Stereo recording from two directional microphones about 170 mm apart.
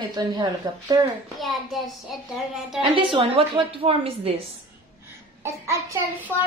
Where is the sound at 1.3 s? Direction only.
Centre (ahead or behind).